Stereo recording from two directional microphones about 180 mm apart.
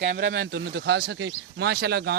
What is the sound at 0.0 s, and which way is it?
Speech, 85° right.